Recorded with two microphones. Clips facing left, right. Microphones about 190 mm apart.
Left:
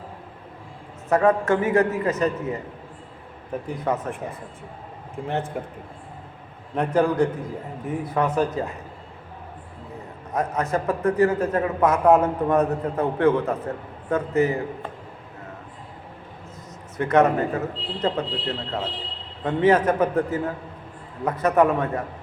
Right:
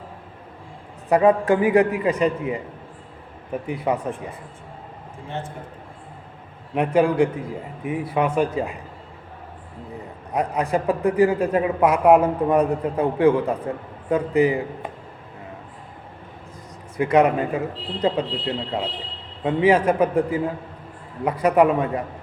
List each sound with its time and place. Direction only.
1.1 s a man's voice: 15° right (ahead or behind)
3.7 s a man's voice: 10° right (ahead or behind)
5.6 s a man's voice: 65° left (ahead or behind)
6.7 s a man's voice: 10° right (ahead or behind)
10.3 s a man's voice: 15° right (ahead or behind)
17.0 s a man's voice: 10° right (ahead or behind)